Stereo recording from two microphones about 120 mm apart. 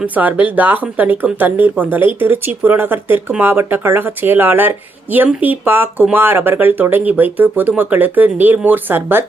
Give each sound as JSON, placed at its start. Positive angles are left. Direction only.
{"t": 0.0, "sound": "speech", "side_deg": -15}